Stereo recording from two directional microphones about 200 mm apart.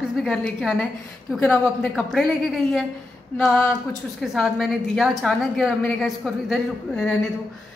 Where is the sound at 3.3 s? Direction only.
5° left (ahead or behind).